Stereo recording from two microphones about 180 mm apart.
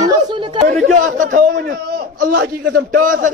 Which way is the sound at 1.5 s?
65° right (ahead or behind).